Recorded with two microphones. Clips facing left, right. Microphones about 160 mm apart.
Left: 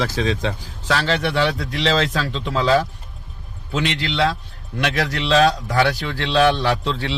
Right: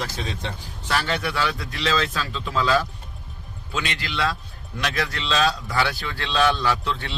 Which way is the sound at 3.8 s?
70° left (ahead or behind).